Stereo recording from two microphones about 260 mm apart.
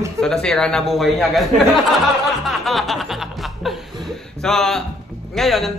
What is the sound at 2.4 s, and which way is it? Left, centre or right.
Music, centre.